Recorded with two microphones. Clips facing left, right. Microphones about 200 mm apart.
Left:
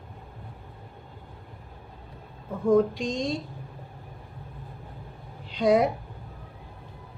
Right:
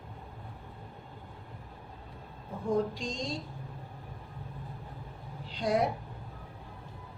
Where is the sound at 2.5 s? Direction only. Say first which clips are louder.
Left 9 dB; 75° left (ahead or behind).